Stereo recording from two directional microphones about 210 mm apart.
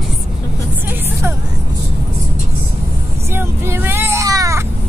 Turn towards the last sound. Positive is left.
turn(degrees=-15)  # may be behind; listen again after turning